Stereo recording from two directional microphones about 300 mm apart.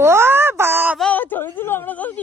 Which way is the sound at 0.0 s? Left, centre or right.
Centre.